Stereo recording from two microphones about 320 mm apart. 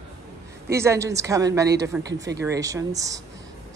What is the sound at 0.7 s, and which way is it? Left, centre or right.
A woman's voice, centre.